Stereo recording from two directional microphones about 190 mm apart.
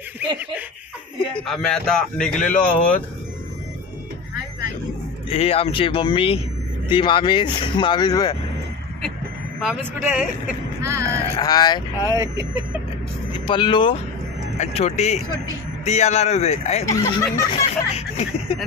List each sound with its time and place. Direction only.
1.3 s a man's voice: 5° left (ahead or behind)
5.3 s speech: 30° left (ahead or behind)
9.7 s a man's voice: 5° right (ahead or behind)
10.8 s speech: 15° right (ahead or behind)
11.3 s speech: 20° left (ahead or behind)
12.1 s speech: 15° right (ahead or behind)
13.5 s speech: 25° left (ahead or behind)
16.8 s speech: 15° left (ahead or behind)
17.5 s speech: 30° left (ahead or behind)